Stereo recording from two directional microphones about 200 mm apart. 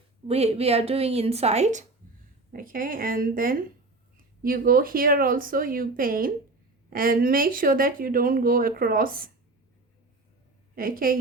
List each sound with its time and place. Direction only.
0.3 s a woman's voice: 30° right (ahead or behind)
2.5 s speech: 45° right (ahead or behind)
10.8 s speech: 45° right (ahead or behind)